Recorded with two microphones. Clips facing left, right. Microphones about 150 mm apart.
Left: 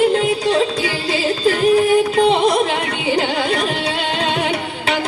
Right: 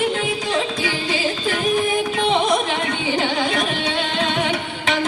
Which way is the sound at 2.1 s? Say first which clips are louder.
Left 4 dB; 35° left (ahead or behind).